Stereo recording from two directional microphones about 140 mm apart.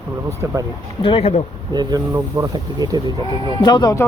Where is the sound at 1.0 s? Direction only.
45° left (ahead or behind).